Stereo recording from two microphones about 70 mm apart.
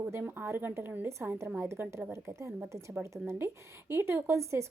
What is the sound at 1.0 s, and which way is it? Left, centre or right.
A woman's voice, right.